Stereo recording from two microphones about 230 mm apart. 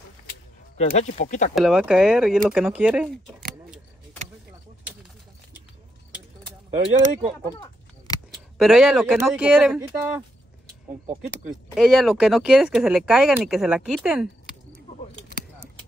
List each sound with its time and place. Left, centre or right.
0.7 s speech: left
1.5 s speech: centre
6.7 s speech: right
7.5 s a sound: centre
8.5 s speech: centre
11.4 s speech: centre